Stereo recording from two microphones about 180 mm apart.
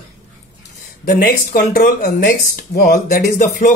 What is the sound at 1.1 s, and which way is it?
Speech, 50° left (ahead or behind).